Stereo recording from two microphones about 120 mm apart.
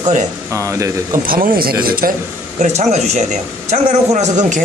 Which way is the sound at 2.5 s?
75° right (ahead or behind).